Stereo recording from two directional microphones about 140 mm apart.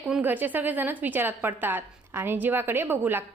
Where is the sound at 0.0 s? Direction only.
10° right (ahead or behind).